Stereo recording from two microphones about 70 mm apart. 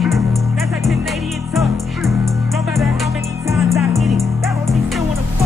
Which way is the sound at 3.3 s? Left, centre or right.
Right.